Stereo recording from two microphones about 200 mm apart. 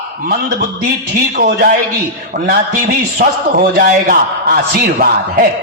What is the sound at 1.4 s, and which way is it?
A man's voice, 50° right (ahead or behind).